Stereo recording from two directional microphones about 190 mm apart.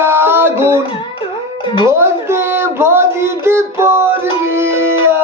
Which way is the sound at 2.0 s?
15° right (ahead or behind).